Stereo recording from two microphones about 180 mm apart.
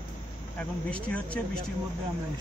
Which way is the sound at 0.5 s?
5° left (ahead or behind).